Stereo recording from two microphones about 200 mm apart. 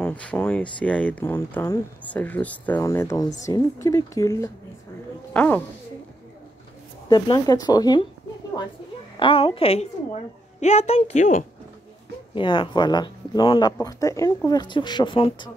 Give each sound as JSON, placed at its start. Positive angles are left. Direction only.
{"t": 0.0, "sound": "speech", "side_deg": 5}
{"t": 7.1, "sound": "speech", "side_deg": 20}
{"t": 9.2, "sound": "a woman's voice", "side_deg": 25}
{"t": 12.4, "sound": "speech", "side_deg": 25}